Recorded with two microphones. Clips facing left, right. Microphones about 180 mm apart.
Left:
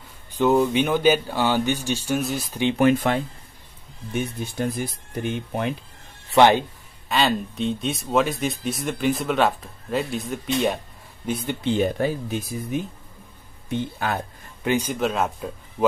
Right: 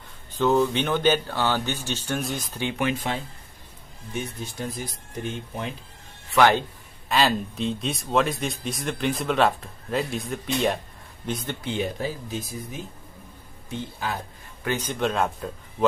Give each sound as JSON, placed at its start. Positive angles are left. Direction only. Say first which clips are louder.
{"t": 0.3, "sound": "speech", "louder": "left 2 dB", "side_deg": 15}
{"t": 2.7, "sound": "speech", "louder": "left 8 dB", "side_deg": 45}
{"t": 6.3, "sound": "speech", "louder": "left 3 dB", "side_deg": 20}
{"t": 7.1, "sound": "speech", "louder": "left 1 dB", "side_deg": 0}
{"t": 11.8, "sound": "speech", "louder": "left 6 dB", "side_deg": 60}
{"t": 14.6, "sound": "speech", "louder": "left 3 dB", "side_deg": 15}